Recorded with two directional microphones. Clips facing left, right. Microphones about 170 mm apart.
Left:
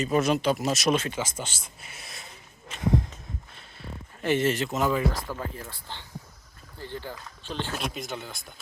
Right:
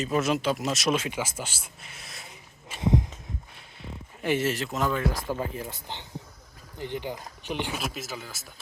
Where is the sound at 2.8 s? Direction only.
20° right (ahead or behind).